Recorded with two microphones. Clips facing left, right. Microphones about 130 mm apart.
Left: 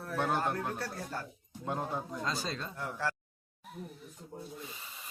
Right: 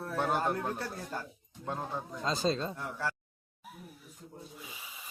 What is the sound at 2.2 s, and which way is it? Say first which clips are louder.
Speech: right 6 dB; 25° right (ahead or behind).